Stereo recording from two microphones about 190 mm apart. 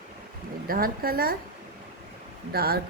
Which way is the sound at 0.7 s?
50° right (ahead or behind).